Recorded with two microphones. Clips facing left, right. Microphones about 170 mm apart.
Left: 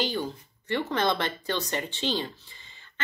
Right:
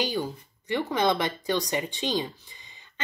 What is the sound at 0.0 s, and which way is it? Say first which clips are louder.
Speech: right 1 dB; 10° right (ahead or behind).